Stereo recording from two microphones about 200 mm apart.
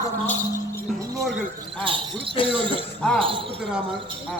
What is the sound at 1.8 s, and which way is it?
Speech, 25° right (ahead or behind).